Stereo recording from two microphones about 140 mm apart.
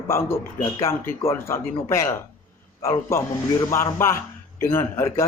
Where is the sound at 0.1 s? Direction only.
20° left (ahead or behind).